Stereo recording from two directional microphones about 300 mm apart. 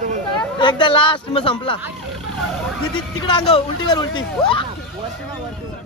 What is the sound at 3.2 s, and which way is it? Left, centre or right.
Speech, centre.